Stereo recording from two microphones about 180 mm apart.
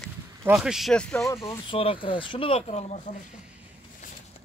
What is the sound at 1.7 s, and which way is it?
Speech, 30° left (ahead or behind).